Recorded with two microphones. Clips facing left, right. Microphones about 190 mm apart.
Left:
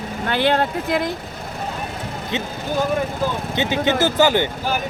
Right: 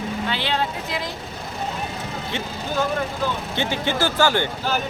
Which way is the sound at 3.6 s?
20° left (ahead or behind).